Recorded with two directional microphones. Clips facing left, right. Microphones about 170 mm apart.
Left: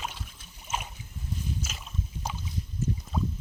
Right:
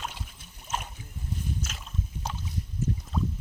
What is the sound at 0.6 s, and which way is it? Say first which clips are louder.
Boat: even; 5° left (ahead or behind).